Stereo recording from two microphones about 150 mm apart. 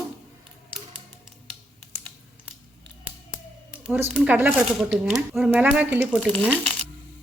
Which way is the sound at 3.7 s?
5° right (ahead or behind).